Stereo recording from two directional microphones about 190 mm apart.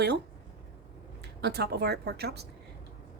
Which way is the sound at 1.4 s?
60° right (ahead or behind).